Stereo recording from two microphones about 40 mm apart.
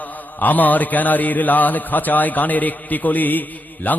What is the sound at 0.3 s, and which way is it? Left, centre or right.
A man's voice, left.